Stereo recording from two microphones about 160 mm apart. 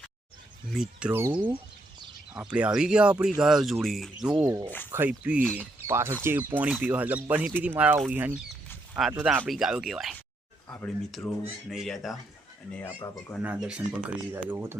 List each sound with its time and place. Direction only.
0.7 s speech: 5° right (ahead or behind)
2.3 s speech: 5° right (ahead or behind)
4.4 s speech: 20° right (ahead or behind); by 12.1 s centre (ahead or behind)
12.7 s speech: 10° left (ahead or behind)
13.4 s speech: 5° right (ahead or behind)